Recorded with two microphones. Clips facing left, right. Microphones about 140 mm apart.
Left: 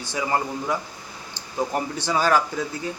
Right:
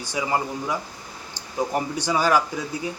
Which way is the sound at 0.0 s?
10° right (ahead or behind).